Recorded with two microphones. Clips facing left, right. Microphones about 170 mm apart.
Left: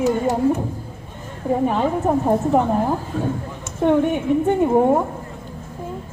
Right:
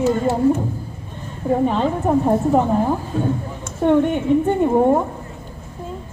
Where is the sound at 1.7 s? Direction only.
5° left (ahead or behind).